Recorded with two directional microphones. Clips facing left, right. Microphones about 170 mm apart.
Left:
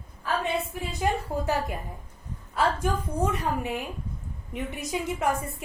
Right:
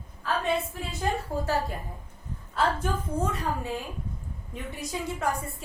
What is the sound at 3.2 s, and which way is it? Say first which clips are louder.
A woman's voice: left 3 dB; 20° left (ahead or behind).